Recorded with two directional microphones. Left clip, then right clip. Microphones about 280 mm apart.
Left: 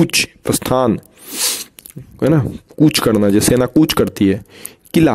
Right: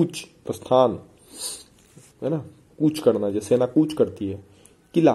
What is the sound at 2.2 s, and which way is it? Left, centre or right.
Speech, left.